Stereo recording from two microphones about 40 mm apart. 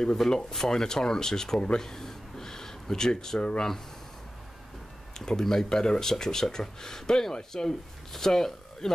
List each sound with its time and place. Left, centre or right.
0.0 s speech: centre
3.3 s speech: left
5.1 s a man's voice: centre